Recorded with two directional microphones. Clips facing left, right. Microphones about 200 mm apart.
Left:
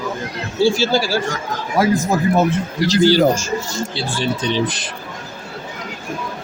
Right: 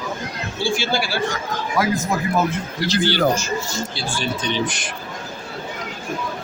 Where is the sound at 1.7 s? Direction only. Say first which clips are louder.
Left 5 dB; 30° left (ahead or behind).